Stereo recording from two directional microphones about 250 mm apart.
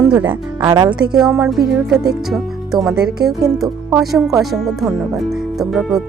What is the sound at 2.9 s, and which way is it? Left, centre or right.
Speech, right.